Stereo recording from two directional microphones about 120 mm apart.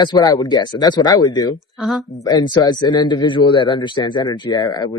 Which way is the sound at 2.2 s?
35° left (ahead or behind).